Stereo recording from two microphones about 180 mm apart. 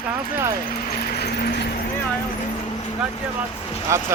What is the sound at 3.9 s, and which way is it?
Speech, 15° right (ahead or behind).